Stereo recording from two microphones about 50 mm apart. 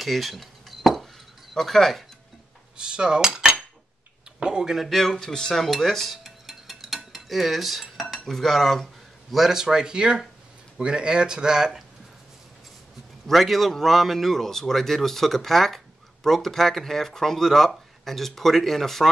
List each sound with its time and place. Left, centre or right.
0.0 s dishes: centre
1.5 s a man's voice: centre
2.8 s cutlery: centre
4.4 s speech: centre
4.8 s dishes: centre
7.2 s cutlery: centre
9.3 s speech: centre
13.3 s a man's voice: centre